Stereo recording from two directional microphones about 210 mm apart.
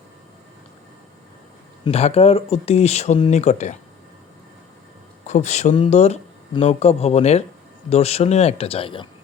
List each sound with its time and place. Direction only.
1.8 s speech: 30° left (ahead or behind)
5.2 s speech: 35° left (ahead or behind)